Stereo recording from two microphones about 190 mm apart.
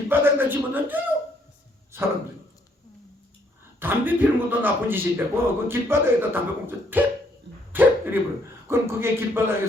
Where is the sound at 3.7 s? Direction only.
10° right (ahead or behind).